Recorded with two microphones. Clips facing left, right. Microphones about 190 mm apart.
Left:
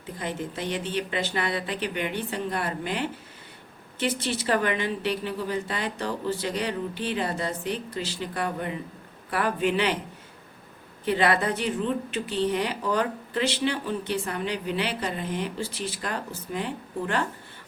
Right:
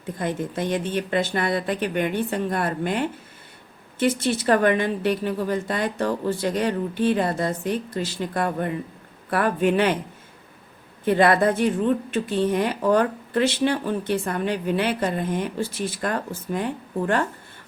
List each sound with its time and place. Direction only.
0.2 s speech: 50° right (ahead or behind)
11.0 s speech: 50° right (ahead or behind)